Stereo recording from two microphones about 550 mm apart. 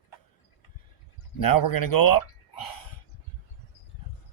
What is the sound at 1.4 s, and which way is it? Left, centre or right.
Speech, left.